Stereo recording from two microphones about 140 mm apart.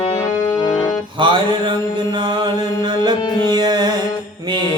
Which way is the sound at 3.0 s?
30° right (ahead or behind).